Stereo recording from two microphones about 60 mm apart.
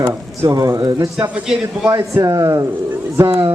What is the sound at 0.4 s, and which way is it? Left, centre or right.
Speech, right.